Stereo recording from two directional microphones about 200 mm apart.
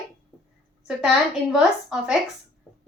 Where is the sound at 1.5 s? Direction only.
5° right (ahead or behind).